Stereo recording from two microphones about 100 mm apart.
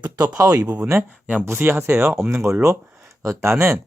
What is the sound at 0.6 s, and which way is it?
Speech, 10° right (ahead or behind).